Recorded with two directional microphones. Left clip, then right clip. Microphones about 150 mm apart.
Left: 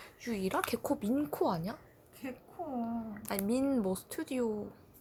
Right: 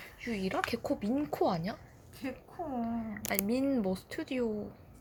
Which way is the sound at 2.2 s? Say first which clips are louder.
Right 3 dB; 15° right (ahead or behind).